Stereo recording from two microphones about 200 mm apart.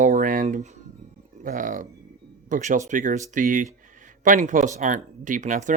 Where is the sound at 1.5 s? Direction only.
40° right (ahead or behind).